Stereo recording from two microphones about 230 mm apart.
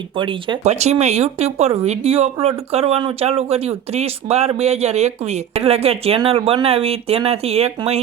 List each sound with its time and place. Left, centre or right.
0.2 s speech: right